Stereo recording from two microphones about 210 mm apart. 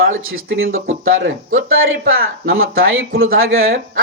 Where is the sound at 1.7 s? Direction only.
70° right (ahead or behind).